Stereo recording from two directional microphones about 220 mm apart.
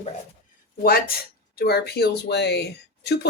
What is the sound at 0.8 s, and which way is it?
Speech, 45° left (ahead or behind).